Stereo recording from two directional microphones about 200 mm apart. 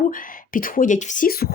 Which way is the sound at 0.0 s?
45° left (ahead or behind).